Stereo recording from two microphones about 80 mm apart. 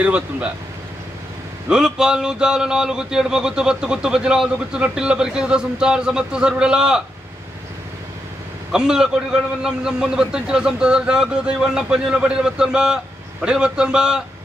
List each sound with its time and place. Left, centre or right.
0.0 s a man's voice: centre
1.7 s a man's voice: centre
8.7 s a man's voice: centre